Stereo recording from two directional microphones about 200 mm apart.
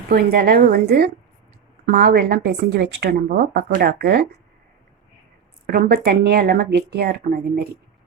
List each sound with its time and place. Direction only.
0.1 s a woman's voice: 50° right (ahead or behind)
5.6 s a woman's voice: 45° right (ahead or behind)